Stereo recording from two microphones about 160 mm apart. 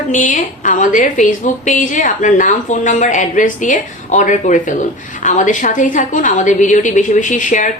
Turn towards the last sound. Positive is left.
turn(degrees=55)  # may be behind; listen again after turning